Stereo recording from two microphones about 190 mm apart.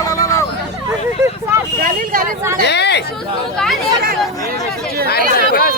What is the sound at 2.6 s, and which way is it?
Chatter, 65° left (ahead or behind).